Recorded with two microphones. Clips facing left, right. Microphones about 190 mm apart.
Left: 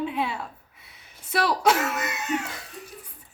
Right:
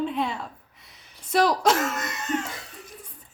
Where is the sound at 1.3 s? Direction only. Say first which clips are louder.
Right 2 dB; 65° left (ahead or behind).